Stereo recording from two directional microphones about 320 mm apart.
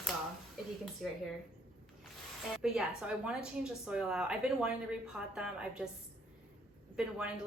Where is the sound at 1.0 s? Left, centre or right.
Centre.